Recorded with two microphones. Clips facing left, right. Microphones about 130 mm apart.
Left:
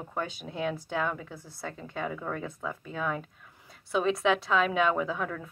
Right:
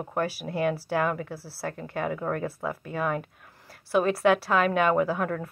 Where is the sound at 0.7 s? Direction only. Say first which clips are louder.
Right 5 dB; 10° right (ahead or behind).